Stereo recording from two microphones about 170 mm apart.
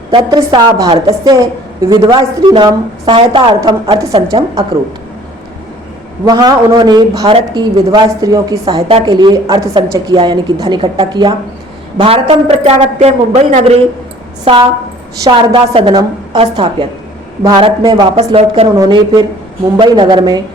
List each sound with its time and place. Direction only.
0.1 s speech: 25° right (ahead or behind)
6.2 s speech: 25° right (ahead or behind)
7.3 s a man's voice: 35° right (ahead or behind)
7.9 s a man's voice: 20° right (ahead or behind); by 13.7 s 40° right (ahead or behind)
15.2 s a man's voice: 30° right (ahead or behind)
17.4 s speech: 25° right (ahead or behind)
18.3 s a man's voice: 35° right (ahead or behind)
18.8 s speech: 25° right (ahead or behind)